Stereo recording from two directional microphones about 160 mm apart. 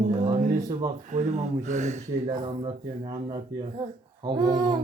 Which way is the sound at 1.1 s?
45° right (ahead or behind).